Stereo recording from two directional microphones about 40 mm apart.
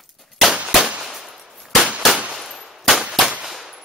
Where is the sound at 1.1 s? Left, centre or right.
Centre.